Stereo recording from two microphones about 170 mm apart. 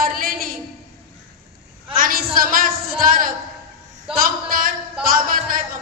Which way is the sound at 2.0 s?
55° right (ahead or behind).